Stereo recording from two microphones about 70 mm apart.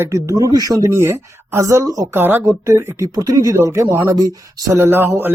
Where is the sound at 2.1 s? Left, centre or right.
Right.